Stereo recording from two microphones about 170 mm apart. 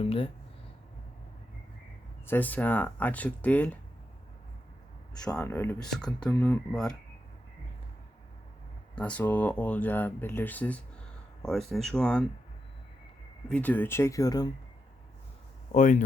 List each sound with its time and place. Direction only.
0.0 s speech: 35° left (ahead or behind)
2.2 s speech: 10° left (ahead or behind)
5.2 s speech: 5° left (ahead or behind)
9.0 s speech: 10° left (ahead or behind)
13.5 s speech: 10° left (ahead or behind)
15.7 s speech: 45° left (ahead or behind)